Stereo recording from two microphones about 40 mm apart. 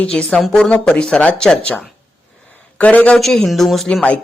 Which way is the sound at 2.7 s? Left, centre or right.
Left.